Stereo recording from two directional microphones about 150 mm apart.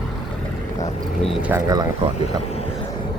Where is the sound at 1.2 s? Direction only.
5° right (ahead or behind).